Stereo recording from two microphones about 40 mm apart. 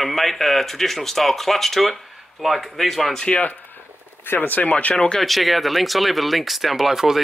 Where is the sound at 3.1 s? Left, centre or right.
Centre.